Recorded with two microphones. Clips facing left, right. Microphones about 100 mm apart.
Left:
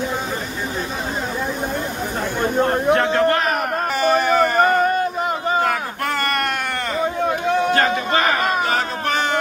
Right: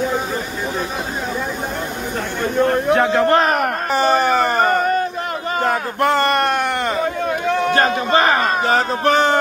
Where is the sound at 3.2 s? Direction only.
30° right (ahead or behind).